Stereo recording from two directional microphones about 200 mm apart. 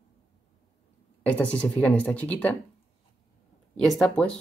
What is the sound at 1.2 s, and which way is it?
Speech, 5° left (ahead or behind).